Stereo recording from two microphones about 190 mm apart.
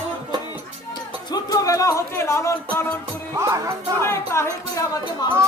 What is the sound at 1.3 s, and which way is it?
Speech, 20° left (ahead or behind).